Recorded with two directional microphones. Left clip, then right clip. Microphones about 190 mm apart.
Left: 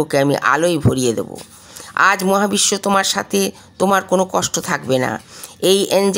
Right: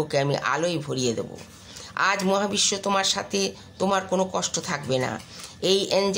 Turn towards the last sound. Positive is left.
turn(degrees=45)  # may be behind; listen again after turning